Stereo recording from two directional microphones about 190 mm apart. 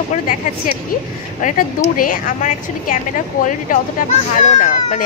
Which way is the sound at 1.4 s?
45° left (ahead or behind).